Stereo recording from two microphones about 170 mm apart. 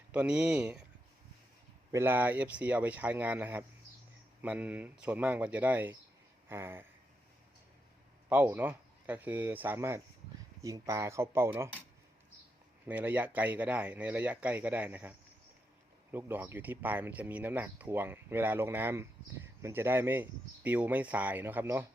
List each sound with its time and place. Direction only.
0.1 s speech: 10° right (ahead or behind)
1.9 s speech: 15° right (ahead or behind)
8.3 s speech: 10° right (ahead or behind)
12.9 s speech: 10° right (ahead or behind)
16.1 s speech: 10° right (ahead or behind)